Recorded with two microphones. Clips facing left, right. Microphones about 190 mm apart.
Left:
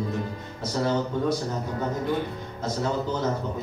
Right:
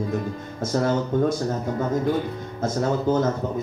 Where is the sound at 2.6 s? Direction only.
50° right (ahead or behind).